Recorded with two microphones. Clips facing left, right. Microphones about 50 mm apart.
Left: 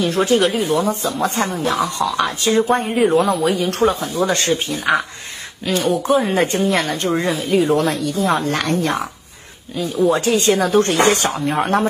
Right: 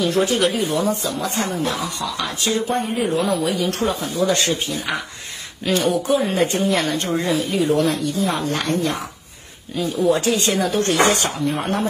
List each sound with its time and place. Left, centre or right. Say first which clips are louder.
0.0 s speech: left 2 dB; left
2.7 s speech: left 5 dB; left
3.3 s speech: left 4 dB; left
5.7 s speech: even; centre
6.3 s speech: left 2 dB; left
7.9 s speech: left 3 dB; left
9.8 s speech: left 2 dB; left